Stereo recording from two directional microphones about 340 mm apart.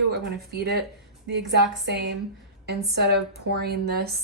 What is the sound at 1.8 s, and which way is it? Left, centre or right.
Speech, right.